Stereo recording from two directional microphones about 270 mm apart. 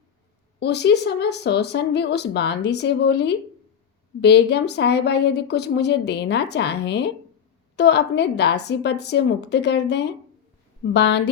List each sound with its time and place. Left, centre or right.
0.6 s a woman's voice: left